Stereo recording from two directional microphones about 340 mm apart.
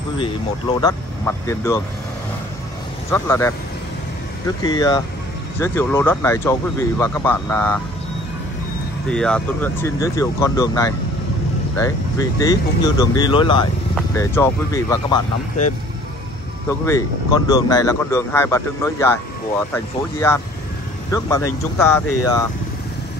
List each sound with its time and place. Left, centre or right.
0.7 s speech: centre
3.1 s speech: centre
9.1 s speech: centre
16.8 s speech: centre
22.0 s speech: left